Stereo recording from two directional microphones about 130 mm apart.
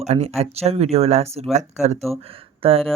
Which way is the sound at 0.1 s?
55° right (ahead or behind).